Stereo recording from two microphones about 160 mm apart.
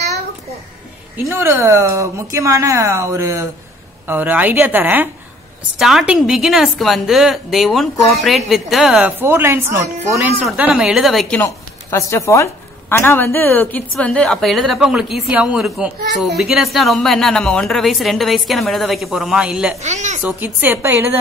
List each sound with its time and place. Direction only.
1.1 s a woman's voice: 15° right (ahead or behind)
9.2 s a woman's voice: 15° right (ahead or behind); by 11.4 s 5° left (ahead or behind)
11.4 s a woman's voice: 20° left (ahead or behind); by 19.7 s 5° right (ahead or behind)
19.8 s speech: 45° right (ahead or behind)
20.2 s a woman's voice: 10° right (ahead or behind)